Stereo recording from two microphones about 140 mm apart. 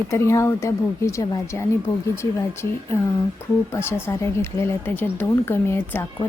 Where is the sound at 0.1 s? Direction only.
20° left (ahead or behind).